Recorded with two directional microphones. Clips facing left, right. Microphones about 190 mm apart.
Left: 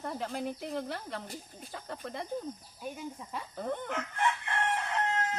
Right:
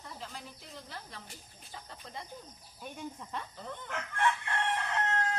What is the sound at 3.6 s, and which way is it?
Chicken, 55° left (ahead or behind).